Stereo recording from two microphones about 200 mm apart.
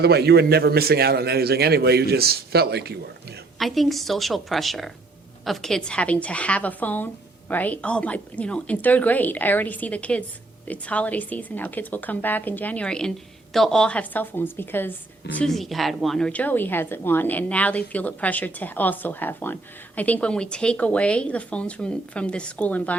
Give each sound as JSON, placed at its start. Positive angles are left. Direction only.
{"t": 0.0, "sound": "a man's voice", "side_deg": -55}
{"t": 3.6, "sound": "a woman's voice", "side_deg": 0}